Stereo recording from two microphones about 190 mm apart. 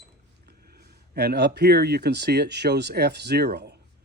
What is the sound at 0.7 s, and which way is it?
Speech, 55° right (ahead or behind).